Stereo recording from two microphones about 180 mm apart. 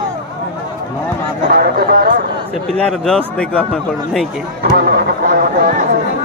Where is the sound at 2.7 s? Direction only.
5° left (ahead or behind).